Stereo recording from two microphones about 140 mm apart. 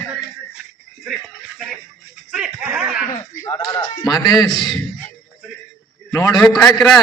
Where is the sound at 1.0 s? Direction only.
5° right (ahead or behind).